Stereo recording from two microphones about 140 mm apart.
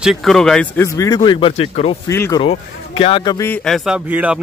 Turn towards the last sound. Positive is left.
turn(degrees=-10)  # may be behind; listen again after turning